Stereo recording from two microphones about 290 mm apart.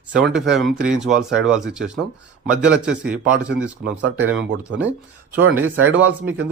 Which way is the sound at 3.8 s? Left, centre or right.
Right.